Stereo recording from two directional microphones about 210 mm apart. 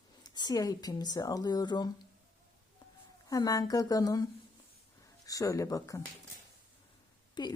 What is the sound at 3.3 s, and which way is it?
Speech, 15° left (ahead or behind).